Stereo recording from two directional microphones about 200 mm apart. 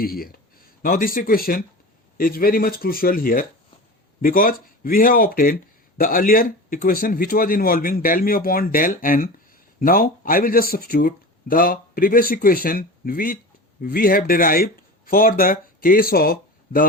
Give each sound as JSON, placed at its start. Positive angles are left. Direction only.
{"t": 0.0, "sound": "speech", "side_deg": 50}